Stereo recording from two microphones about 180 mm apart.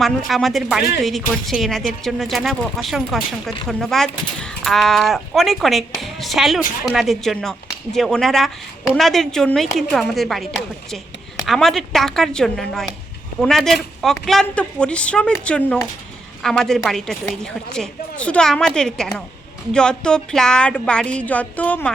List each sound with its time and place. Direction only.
0.0 s a woman's voice: centre (ahead or behind)